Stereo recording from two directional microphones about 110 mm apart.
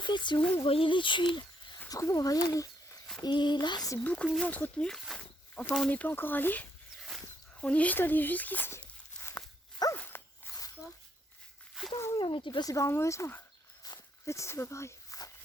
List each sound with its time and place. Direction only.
0.0 s a sound: 45° left (ahead or behind)
0.5 s speech: 55° left (ahead or behind)
1.9 s speech: 30° left (ahead or behind)
3.2 s a sound: 40° left (ahead or behind)
4.0 s speech: 10° left (ahead or behind)
5.9 s speech: 15° left (ahead or behind)
9.9 s dog: 20° left (ahead or behind)
11.8 s speech: 5° right (ahead or behind)
12.1 s speech: 45° left (ahead or behind); by 15.3 s 30° left (ahead or behind)